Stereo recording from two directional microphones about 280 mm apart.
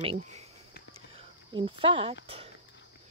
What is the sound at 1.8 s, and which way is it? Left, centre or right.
Speech, centre.